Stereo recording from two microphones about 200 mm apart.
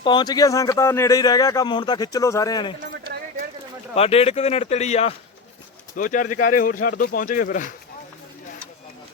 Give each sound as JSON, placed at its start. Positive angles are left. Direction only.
{"t": 0.0, "sound": "speech", "side_deg": 20}
{"t": 3.9, "sound": "speech", "side_deg": 30}